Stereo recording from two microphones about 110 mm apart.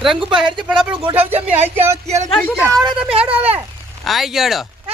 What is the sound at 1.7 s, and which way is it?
Speech, 20° right (ahead or behind).